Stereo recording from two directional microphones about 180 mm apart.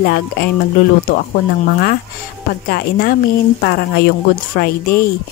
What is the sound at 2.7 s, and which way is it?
Speech, 55° left (ahead or behind).